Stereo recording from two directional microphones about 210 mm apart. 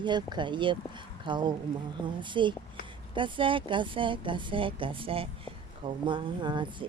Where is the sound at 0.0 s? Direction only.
20° right (ahead or behind).